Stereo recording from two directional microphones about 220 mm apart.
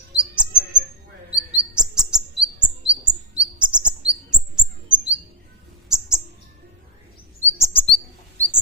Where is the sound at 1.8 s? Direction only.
5° right (ahead or behind).